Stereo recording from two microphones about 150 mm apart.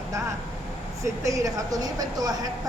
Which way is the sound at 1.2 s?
20° right (ahead or behind).